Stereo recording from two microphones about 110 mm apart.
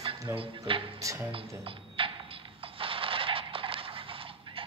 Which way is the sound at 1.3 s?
55° right (ahead or behind).